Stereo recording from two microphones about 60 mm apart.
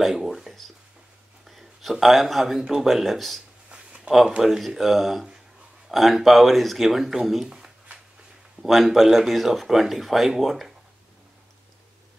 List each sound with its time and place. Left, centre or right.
0.0 s a man's voice: centre
3.6 s a sound: centre
4.4 s speech: centre
7.4 s shuffling cards: centre
8.6 s speech: centre